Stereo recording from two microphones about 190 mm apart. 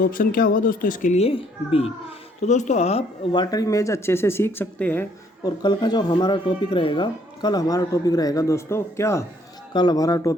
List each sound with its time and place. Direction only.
0.0 s speech: 50° left (ahead or behind)
3.4 s speech: 20° left (ahead or behind)
5.4 s speech: 20° left (ahead or behind)